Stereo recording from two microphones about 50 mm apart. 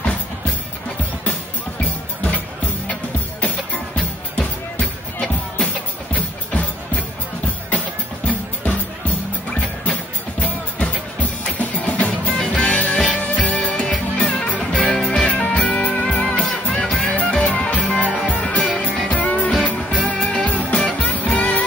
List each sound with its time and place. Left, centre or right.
3.3 s music: left
8.3 s music: left